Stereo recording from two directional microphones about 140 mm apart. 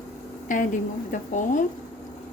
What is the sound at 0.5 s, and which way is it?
Speech, 70° left (ahead or behind).